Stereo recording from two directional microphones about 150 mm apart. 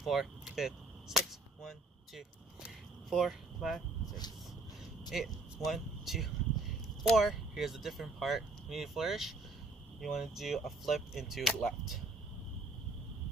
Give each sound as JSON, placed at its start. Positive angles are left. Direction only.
{"t": 0.0, "sound": "arrow", "side_deg": 0}
{"t": 4.0, "sound": "a sound", "side_deg": 25}
{"t": 5.7, "sound": "speech", "side_deg": 0}